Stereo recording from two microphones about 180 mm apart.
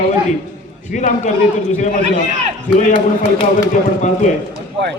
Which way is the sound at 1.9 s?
40° right (ahead or behind).